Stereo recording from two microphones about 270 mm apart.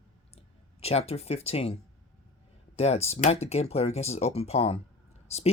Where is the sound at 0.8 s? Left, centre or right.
Left.